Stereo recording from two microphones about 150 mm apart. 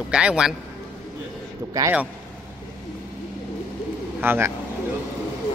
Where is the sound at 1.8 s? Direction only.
20° right (ahead or behind).